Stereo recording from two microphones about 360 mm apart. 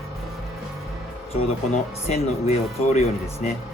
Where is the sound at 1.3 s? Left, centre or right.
Centre.